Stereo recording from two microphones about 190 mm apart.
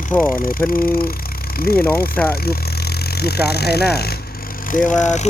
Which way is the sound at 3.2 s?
55° left (ahead or behind).